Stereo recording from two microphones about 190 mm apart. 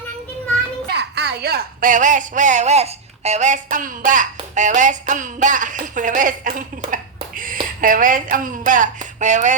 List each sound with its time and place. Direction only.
0.9 s a woman's voice: 60° right (ahead or behind); by 9.6 s 40° right (ahead or behind)